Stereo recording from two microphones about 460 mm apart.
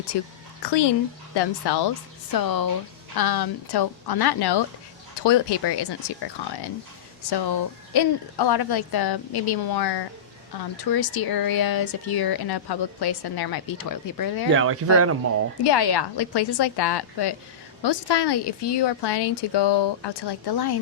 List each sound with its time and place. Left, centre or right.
0.1 s a woman's voice: left
14.5 s speech: right
15.6 s a woman's voice: left